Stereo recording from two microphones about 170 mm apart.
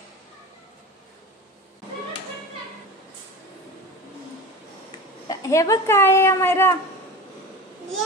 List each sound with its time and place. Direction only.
5.3 s speech: 20° left (ahead or behind)